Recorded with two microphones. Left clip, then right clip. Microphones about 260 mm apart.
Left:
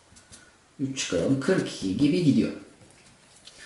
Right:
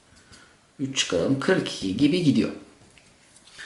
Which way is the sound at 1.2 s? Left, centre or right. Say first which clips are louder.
Right 2 dB; centre.